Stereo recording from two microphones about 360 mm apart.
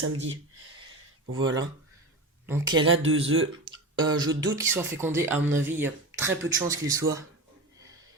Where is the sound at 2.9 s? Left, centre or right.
Right.